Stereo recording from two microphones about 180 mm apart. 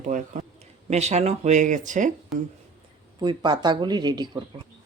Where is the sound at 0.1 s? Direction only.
45° right (ahead or behind).